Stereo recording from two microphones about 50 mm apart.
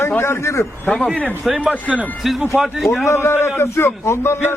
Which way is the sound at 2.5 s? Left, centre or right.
Centre.